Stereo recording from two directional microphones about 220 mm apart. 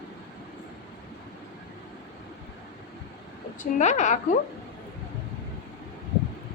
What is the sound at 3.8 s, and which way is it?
Speech, 30° left (ahead or behind).